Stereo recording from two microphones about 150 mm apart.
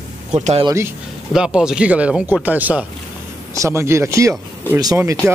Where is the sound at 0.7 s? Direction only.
20° right (ahead or behind).